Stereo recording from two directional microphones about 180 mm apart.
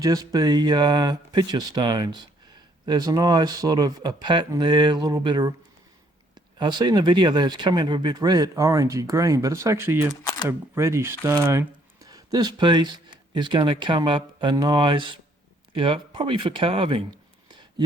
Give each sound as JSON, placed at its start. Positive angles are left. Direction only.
{"t": 0.0, "sound": "speech", "side_deg": -20}
{"t": 6.6, "sound": "speech", "side_deg": -25}